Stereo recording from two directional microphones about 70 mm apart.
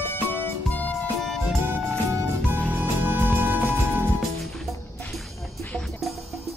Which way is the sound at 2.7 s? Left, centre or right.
Right.